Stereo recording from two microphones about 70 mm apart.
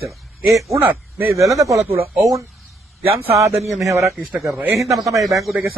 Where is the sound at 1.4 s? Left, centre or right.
Right.